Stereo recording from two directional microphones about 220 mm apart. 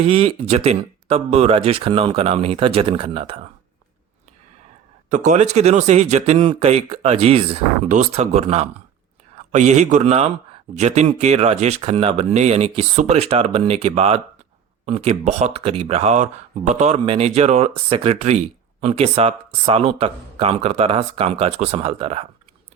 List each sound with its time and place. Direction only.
0.0 s speech: 25° right (ahead or behind)
5.0 s speech: 35° right (ahead or behind)